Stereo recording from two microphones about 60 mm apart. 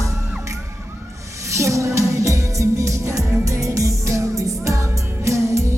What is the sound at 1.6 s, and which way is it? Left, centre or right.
Music, right.